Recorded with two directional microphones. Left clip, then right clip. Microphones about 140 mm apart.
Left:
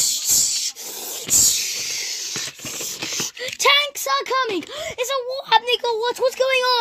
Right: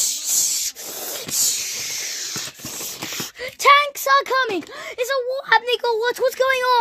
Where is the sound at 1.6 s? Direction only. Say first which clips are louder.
Left 2 dB; 15° right (ahead or behind).